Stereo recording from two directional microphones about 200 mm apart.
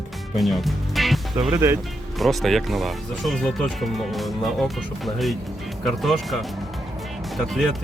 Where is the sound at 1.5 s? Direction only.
15° right (ahead or behind).